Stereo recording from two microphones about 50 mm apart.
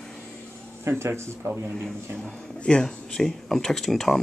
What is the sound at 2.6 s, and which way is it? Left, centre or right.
Speech, centre.